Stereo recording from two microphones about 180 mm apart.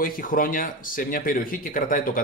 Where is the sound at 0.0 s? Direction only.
50° left (ahead or behind).